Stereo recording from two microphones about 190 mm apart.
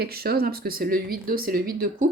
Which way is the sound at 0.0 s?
55° right (ahead or behind).